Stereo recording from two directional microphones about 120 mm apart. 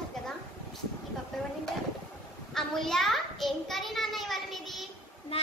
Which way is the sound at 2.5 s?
5° left (ahead or behind).